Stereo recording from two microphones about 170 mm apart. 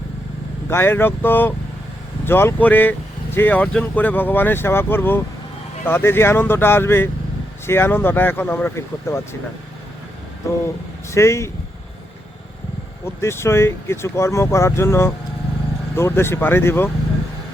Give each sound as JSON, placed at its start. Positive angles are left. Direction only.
{"t": 0.7, "sound": "speech", "side_deg": 15}
{"t": 11.1, "sound": "speech", "side_deg": 15}
{"t": 13.1, "sound": "speech", "side_deg": 15}